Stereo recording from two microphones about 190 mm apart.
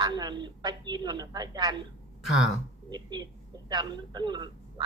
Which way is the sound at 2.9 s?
20° right (ahead or behind).